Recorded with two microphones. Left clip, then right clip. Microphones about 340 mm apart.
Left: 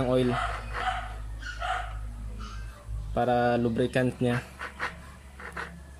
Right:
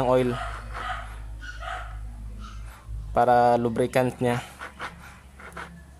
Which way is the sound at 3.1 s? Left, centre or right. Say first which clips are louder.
Right 6 dB; centre.